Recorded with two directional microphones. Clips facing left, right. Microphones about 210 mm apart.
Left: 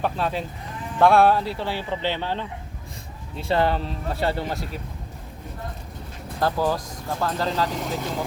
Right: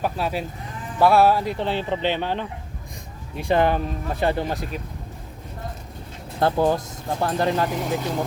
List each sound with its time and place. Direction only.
0.0 s speech: 10° right (ahead or behind)
6.4 s speech: 25° right (ahead or behind)